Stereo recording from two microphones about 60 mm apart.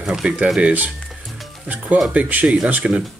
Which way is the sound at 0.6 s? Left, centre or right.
Right.